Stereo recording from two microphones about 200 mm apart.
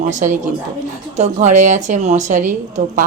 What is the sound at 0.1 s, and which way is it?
A woman's voice, 40° right (ahead or behind).